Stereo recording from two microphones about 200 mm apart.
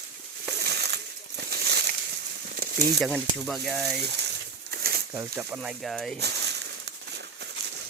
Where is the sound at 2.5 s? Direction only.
50° right (ahead or behind).